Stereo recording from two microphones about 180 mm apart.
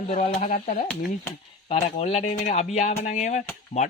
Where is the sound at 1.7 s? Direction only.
35° left (ahead or behind).